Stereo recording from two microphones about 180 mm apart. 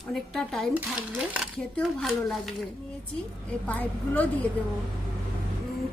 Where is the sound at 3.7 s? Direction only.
10° left (ahead or behind).